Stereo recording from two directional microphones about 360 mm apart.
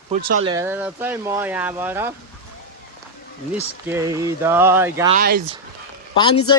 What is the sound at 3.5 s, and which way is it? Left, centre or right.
Speech, centre.